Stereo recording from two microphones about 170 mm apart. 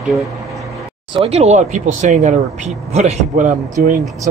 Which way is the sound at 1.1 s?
35° right (ahead or behind).